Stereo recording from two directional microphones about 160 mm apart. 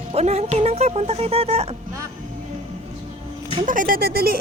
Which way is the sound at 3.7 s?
60° right (ahead or behind).